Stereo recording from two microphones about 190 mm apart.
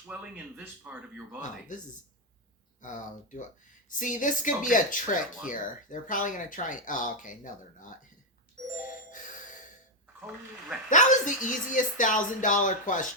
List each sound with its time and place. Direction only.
0.1 s speech: 10° right (ahead or behind)
1.4 s speech: 40° left (ahead or behind)
2.8 s speech: 40° left (ahead or behind)
10.2 s speech: 5° right (ahead or behind)
10.8 s speech: 40° left (ahead or behind)